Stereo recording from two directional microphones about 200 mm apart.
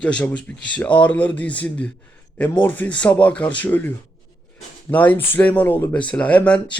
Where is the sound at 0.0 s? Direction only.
5° left (ahead or behind).